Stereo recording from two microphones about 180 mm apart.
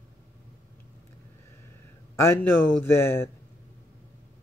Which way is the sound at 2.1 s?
15° left (ahead or behind).